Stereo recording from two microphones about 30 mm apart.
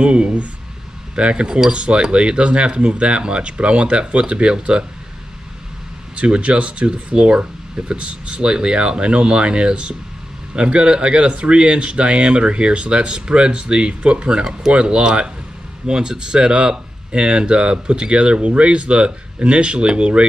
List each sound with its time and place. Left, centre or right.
0.0 s speech: right
6.1 s speech: right
7.1 s speech: right